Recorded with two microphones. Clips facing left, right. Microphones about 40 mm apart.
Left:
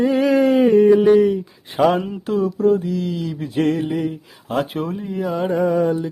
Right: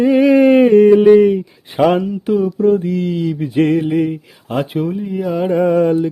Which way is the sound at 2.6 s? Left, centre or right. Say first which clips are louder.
Right 3 dB; right.